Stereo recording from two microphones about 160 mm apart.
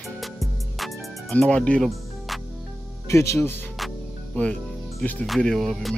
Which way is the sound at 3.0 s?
20° left (ahead or behind).